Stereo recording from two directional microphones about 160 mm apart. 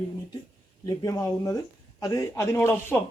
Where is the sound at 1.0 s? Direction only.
20° left (ahead or behind).